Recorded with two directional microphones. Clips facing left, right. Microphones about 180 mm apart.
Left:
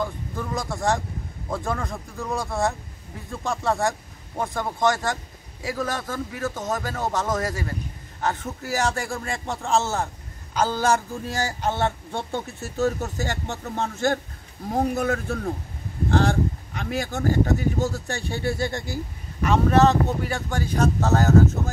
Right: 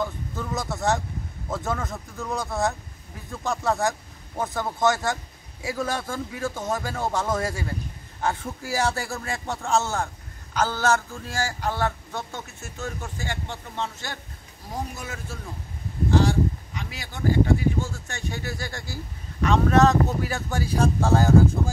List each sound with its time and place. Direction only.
0.5 s speech: 5° right (ahead or behind)
8.6 s speech: 10° right (ahead or behind)
10.5 s a man's voice: 10° left (ahead or behind)
19.4 s speech: 5° left (ahead or behind); by 21.7 s 10° right (ahead or behind)